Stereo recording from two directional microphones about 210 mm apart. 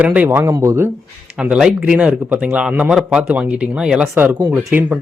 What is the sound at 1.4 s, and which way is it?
A man's voice, 5° right (ahead or behind).